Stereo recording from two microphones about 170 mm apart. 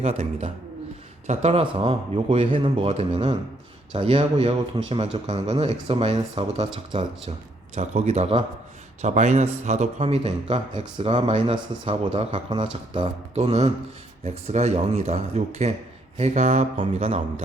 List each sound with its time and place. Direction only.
0.0 s speech: 40° right (ahead or behind)
7.8 s speech: 40° right (ahead or behind)